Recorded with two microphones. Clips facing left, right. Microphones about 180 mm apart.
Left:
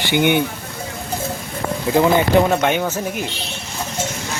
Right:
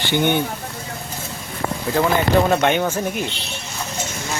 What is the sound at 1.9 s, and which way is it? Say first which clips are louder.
Speech: left 4 dB; 20° left (ahead or behind).